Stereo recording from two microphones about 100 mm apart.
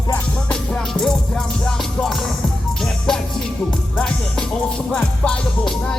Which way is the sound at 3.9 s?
10° left (ahead or behind).